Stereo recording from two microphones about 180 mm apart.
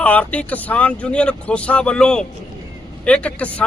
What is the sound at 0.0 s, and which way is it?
Speech, 10° left (ahead or behind).